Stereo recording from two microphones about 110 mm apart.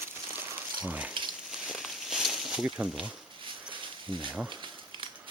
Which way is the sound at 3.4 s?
45° right (ahead or behind).